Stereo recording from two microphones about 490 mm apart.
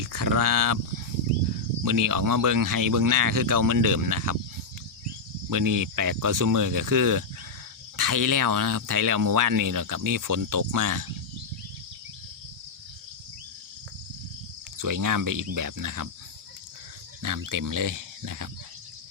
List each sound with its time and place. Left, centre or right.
0.0 s speech: right
1.8 s speech: right
5.5 s speech: right
14.8 s speech: right
17.2 s speech: right